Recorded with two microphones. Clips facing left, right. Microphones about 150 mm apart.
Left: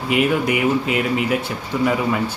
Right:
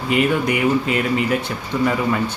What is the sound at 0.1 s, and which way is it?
Speech, 5° left (ahead or behind).